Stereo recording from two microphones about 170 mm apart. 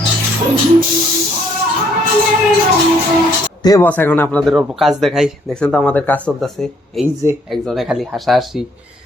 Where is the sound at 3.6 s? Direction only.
20° left (ahead or behind).